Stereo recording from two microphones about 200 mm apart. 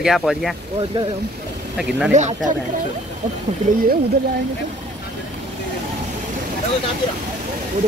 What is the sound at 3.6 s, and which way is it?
Speech, 40° right (ahead or behind).